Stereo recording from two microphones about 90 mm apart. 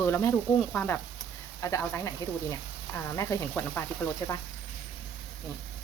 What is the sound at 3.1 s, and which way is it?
Speech, 35° left (ahead or behind).